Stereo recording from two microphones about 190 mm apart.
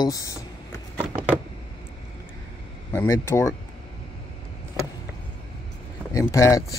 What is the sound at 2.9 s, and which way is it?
Speech, 15° left (ahead or behind).